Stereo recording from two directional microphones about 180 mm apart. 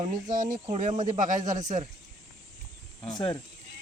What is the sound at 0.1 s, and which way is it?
Speech, 45° right (ahead or behind).